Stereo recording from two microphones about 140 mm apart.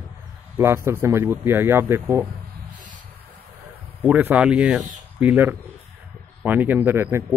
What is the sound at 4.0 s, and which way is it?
Speech, 10° right (ahead or behind).